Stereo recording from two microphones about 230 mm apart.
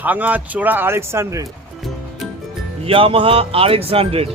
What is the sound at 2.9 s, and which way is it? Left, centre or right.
Speech, right.